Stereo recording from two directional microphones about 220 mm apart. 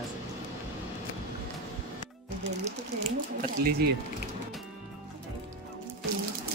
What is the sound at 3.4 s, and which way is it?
Speech, 45° right (ahead or behind).